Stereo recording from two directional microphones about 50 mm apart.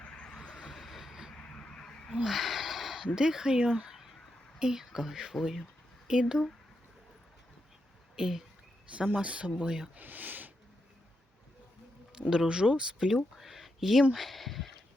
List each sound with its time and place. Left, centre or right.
0.0 s vehicle: centre
0.5 s vehicle: centre
1.3 s a sound: centre
2.2 s a sound: centre
3.2 s speech: centre
3.8 s a sound: centre
4.6 s speech: centre
8.1 s speech: centre
8.9 s speech: right
9.6 s speech: centre
9.9 s speech: right
12.3 s speech: centre
13.1 s a sound: centre
14.1 s speech: centre